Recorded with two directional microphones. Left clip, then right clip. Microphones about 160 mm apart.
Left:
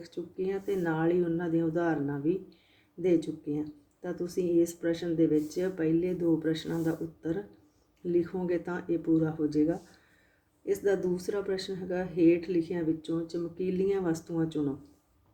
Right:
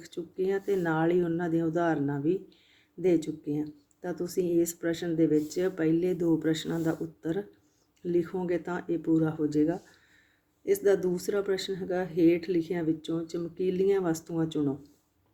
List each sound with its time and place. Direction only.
0.0 s speech: 30° right (ahead or behind)